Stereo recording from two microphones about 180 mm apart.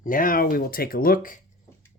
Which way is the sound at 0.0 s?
50° left (ahead or behind).